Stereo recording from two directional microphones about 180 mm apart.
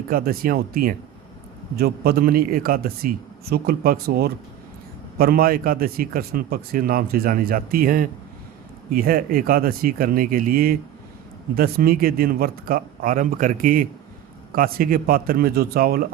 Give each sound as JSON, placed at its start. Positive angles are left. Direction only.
{"t": 0.1, "sound": "a man's voice", "side_deg": -55}